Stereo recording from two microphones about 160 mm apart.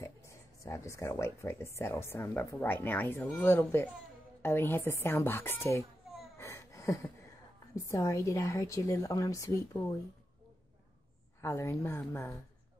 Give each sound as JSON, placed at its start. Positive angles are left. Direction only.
{"t": 0.0, "sound": "speech", "side_deg": 15}
{"t": 6.3, "sound": "wheeze", "side_deg": 20}
{"t": 7.7, "sound": "a woman's voice", "side_deg": 20}
{"t": 11.4, "sound": "speech", "side_deg": 20}